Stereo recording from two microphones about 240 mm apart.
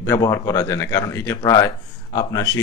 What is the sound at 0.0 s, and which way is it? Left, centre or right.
Speech, centre.